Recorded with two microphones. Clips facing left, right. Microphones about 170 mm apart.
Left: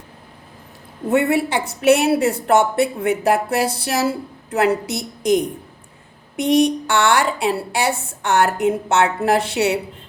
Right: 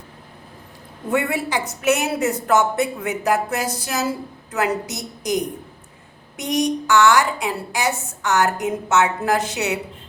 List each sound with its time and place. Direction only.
1.1 s a woman's voice: 25° left (ahead or behind)